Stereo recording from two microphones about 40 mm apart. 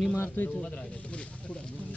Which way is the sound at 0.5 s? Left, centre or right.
Left.